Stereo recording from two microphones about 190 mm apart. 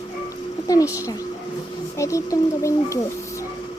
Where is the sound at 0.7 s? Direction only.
15° left (ahead or behind).